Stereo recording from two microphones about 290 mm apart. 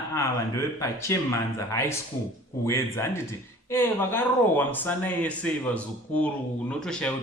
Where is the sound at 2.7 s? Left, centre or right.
Centre.